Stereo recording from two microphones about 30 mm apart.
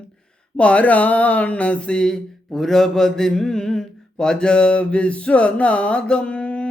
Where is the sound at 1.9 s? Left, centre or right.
Left.